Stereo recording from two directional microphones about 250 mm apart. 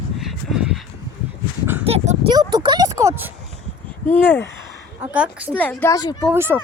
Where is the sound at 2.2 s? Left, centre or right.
Centre.